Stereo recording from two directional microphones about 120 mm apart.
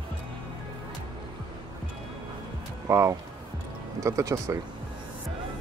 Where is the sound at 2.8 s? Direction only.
25° right (ahead or behind).